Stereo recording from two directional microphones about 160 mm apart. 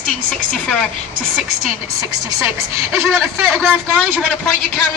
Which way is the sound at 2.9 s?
Centre (ahead or behind).